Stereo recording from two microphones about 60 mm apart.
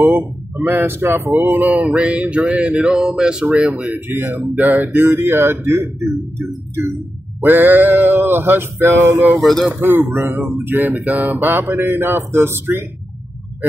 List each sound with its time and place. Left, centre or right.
0.6 s speech: right; by 4.0 s centre
4.1 s speech: right
9.4 s speech: centre
9.8 s speech: right